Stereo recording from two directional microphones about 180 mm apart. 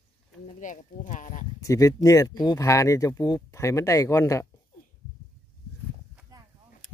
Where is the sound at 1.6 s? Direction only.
20° left (ahead or behind).